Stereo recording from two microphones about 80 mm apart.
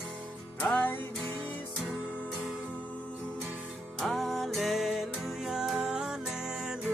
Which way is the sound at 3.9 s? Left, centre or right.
Centre.